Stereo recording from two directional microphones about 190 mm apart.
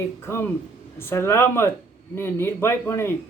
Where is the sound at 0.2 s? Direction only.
15° left (ahead or behind).